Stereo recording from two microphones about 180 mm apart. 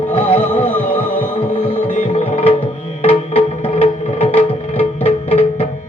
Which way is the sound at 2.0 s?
35° left (ahead or behind).